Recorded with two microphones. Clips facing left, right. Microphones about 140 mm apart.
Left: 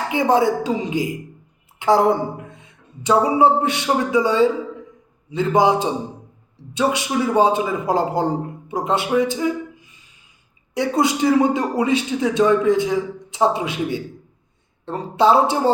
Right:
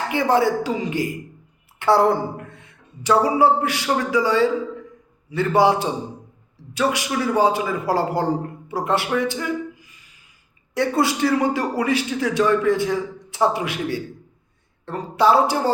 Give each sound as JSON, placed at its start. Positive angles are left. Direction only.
{"t": 0.1, "sound": "a man's voice", "side_deg": 20}